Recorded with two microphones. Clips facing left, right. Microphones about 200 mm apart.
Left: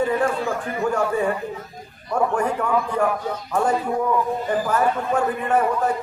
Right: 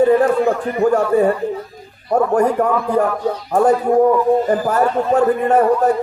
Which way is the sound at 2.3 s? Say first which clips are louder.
Right 6 dB; 40° right (ahead or behind).